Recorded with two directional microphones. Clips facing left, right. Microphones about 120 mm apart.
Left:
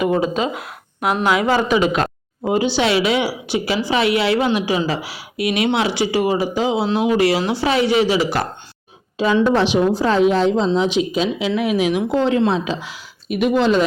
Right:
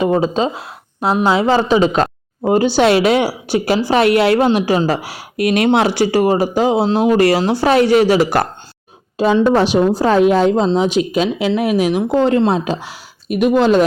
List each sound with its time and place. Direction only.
0.0 s speech: 30° right (ahead or behind)
2.5 s a woman's voice: 45° right (ahead or behind)
9.7 s speech: centre (ahead or behind)
10.1 s a woman's voice: 55° right (ahead or behind)